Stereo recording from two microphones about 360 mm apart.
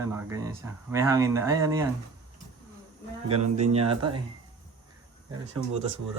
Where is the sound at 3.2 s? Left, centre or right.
Centre.